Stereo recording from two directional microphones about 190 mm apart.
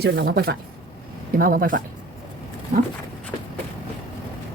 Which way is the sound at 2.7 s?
40° right (ahead or behind).